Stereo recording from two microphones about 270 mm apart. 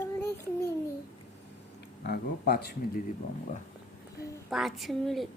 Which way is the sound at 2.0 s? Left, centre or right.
Left.